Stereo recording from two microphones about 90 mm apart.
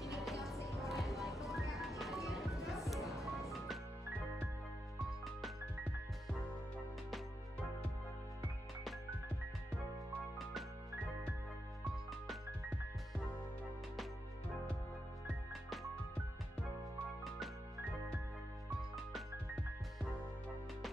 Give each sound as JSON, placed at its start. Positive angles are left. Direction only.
{"t": 0.0, "sound": "music", "side_deg": 0}